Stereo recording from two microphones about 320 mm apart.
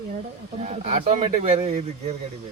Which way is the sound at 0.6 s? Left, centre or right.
Centre.